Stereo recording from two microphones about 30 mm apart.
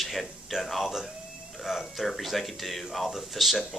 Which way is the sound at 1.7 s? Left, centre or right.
Centre.